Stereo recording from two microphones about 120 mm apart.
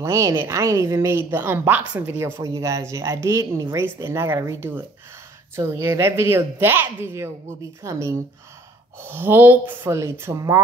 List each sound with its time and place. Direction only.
0.0 s a woman's voice: 25° right (ahead or behind)
2.3 s a woman's voice: 30° right (ahead or behind)